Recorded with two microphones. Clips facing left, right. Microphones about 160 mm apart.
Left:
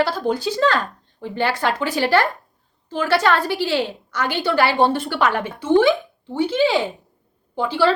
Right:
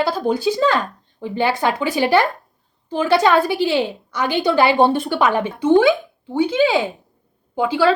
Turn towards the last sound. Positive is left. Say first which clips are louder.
# right 4 dB
turn(degrees=-15)  # may be behind; listen again after turning